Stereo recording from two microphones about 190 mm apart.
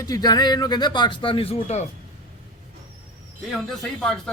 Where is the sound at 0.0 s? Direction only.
20° left (ahead or behind).